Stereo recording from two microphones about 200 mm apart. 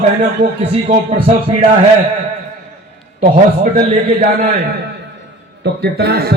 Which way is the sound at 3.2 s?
40° right (ahead or behind).